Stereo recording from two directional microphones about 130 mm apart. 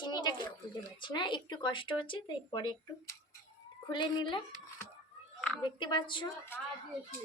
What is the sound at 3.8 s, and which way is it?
Speech, 35° left (ahead or behind).